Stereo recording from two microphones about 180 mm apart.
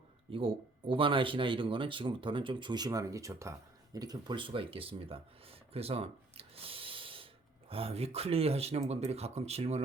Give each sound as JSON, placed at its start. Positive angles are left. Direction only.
{"t": 0.3, "sound": "speech", "side_deg": -30}